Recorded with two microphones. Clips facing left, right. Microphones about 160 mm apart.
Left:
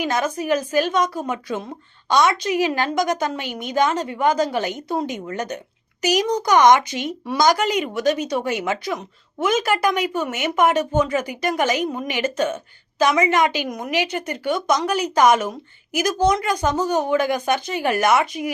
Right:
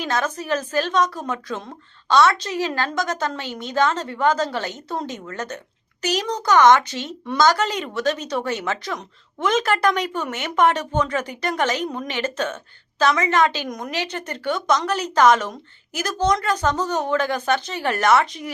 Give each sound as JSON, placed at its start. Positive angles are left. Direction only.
{"t": 0.0, "sound": "speech", "side_deg": 10}